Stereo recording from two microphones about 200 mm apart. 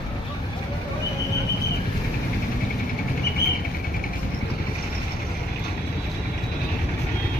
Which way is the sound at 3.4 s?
50° left (ahead or behind).